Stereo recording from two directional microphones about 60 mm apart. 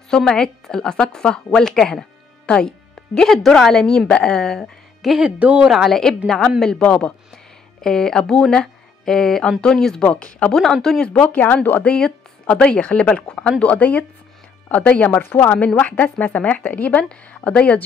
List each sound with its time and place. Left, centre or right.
0.1 s a woman's voice: centre
5.0 s speech: centre
5.4 s speech: right
5.7 s a woman's voice: centre
10.0 s speech: left
10.5 s a woman's voice: centre
11.2 s speech: left
11.8 s speech: centre